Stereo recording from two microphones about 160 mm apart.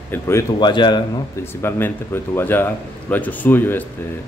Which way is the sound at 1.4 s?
15° left (ahead or behind).